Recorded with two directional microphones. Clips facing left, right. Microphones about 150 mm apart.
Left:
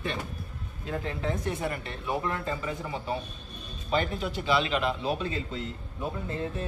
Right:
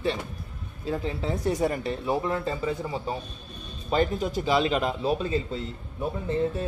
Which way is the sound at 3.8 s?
45° right (ahead or behind).